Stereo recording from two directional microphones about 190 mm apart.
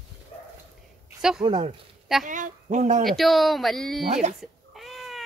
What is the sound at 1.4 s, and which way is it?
Speech, 25° right (ahead or behind).